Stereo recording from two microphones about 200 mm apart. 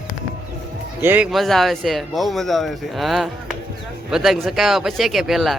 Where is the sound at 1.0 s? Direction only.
5° right (ahead or behind).